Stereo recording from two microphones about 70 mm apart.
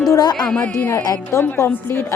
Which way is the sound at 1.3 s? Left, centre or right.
Left.